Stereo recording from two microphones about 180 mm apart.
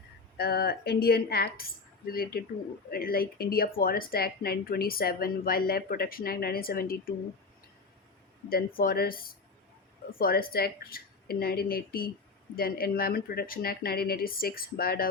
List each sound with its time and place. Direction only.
0.3 s speech: 60° left (ahead or behind)
8.4 s speech: 55° left (ahead or behind)